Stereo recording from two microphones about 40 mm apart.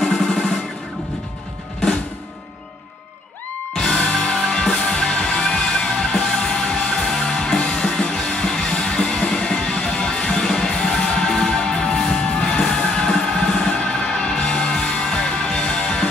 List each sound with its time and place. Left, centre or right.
0.0 s music: centre
3.7 s music: centre
12.9 s a sound: centre
13.8 s music: centre